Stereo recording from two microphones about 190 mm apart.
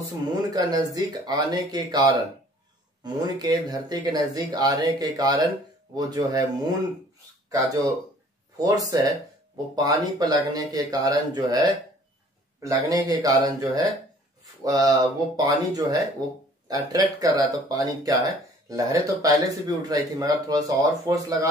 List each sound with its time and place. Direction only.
0.3 s speech: 20° right (ahead or behind)